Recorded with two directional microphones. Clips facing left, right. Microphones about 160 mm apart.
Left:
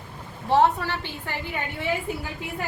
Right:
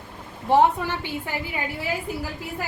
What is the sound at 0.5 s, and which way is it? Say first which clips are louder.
A woman's voice: right 2 dB; 15° right (ahead or behind).